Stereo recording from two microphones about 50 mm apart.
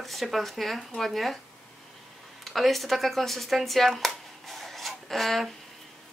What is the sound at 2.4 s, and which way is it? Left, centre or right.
Speech, centre.